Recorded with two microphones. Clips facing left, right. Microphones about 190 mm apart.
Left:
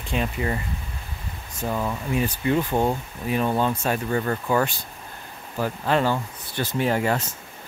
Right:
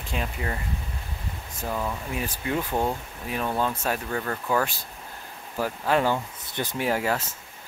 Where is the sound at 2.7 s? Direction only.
25° left (ahead or behind).